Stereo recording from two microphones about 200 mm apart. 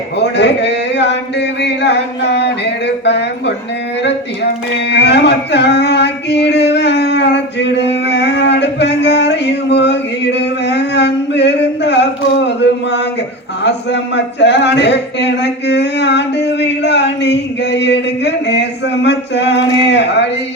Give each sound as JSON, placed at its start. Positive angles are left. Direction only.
{"t": 0.2, "sound": "speech", "side_deg": 60}
{"t": 4.9, "sound": "a sound", "side_deg": 55}
{"t": 13.7, "sound": "speech", "side_deg": 60}